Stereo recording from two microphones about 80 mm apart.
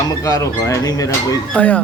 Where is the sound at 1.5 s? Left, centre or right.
Centre.